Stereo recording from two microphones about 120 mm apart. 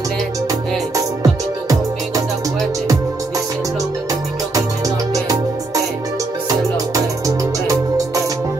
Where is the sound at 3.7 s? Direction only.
30° right (ahead or behind).